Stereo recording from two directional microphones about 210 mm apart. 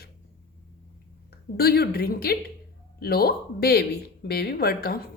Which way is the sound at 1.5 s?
50° left (ahead or behind).